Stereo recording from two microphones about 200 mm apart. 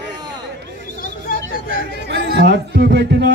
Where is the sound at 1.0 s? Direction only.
45° left (ahead or behind).